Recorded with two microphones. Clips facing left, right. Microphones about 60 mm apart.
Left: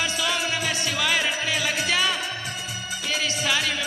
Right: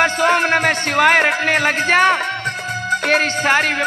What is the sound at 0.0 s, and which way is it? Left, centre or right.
Music, right.